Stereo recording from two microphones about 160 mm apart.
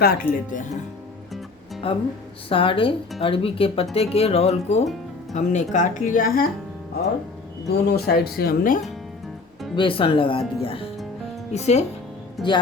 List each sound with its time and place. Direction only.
0.0 s speech: 65° left (ahead or behind)
1.8 s a woman's voice: 35° left (ahead or behind); by 6.4 s 60° left (ahead or behind)
7.7 s speech: 85° left; by 8.8 s 60° left (ahead or behind)
9.7 s speech: 35° left (ahead or behind)
12.4 s speech: centre (ahead or behind)